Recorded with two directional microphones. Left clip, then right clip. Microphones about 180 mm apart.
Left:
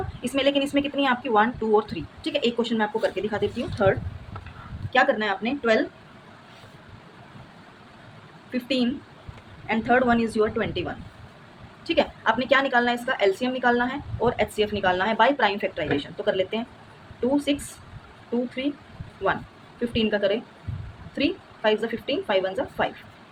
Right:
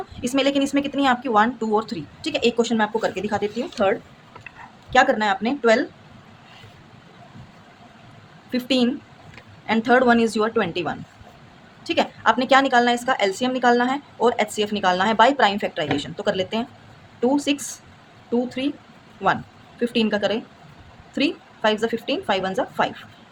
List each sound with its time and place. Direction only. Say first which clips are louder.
0.2 s a woman's voice: right 2 dB; 30° right (ahead or behind)
8.5 s a woman's voice: right 4 dB; 40° right (ahead or behind)
19.8 s a woman's voice: right 2 dB; 35° right (ahead or behind)